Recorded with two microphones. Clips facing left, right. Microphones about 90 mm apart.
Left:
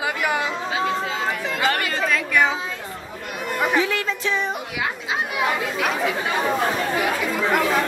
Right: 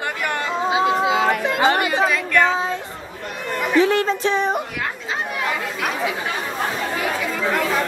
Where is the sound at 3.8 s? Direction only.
35° right (ahead or behind).